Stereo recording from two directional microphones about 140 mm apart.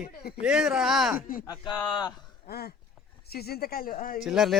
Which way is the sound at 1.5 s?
25° left (ahead or behind).